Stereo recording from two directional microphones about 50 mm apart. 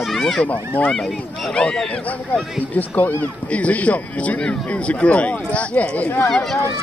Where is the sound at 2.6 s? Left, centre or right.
Left.